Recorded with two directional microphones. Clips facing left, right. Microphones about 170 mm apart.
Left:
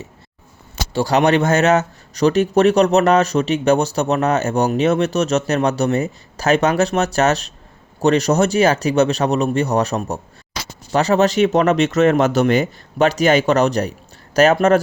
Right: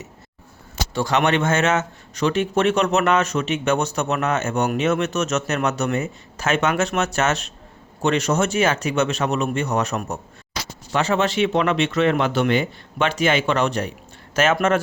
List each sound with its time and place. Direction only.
0.9 s speech: 35° left (ahead or behind)